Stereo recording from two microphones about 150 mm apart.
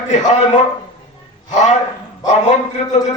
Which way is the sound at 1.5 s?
50° left (ahead or behind).